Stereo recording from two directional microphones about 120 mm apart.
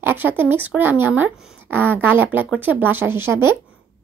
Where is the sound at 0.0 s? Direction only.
15° right (ahead or behind).